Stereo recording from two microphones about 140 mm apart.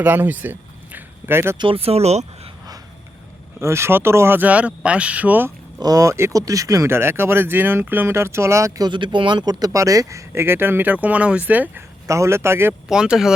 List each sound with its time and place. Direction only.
0.0 s a sound: 10° right (ahead or behind)
1.5 s speech: 40° right (ahead or behind)
3.6 s speech: 20° right (ahead or behind)
5.8 s speech: 25° right (ahead or behind)
8.9 s speech: 35° right (ahead or behind); by 12.7 s 20° right (ahead or behind)
12.9 s speech: 5° right (ahead or behind)